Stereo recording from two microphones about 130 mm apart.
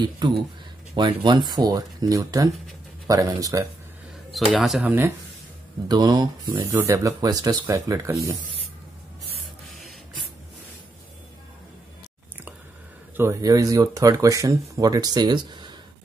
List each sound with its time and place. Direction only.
0.9 s speech: 35° right (ahead or behind)
4.3 s speech: centre (ahead or behind)
5.9 s speech: 30° right (ahead or behind)
6.5 s speech: 15° right (ahead or behind)
13.1 s speech: 20° right (ahead or behind); by 15.7 s 35° right (ahead or behind)